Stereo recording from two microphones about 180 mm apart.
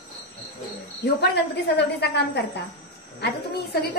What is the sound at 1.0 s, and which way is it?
A woman's voice, 70° left (ahead or behind).